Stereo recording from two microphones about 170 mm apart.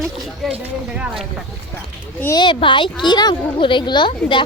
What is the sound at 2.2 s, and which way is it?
A woman's voice, 25° left (ahead or behind).